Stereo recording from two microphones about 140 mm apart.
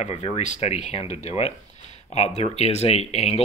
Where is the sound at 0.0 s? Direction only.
50° left (ahead or behind).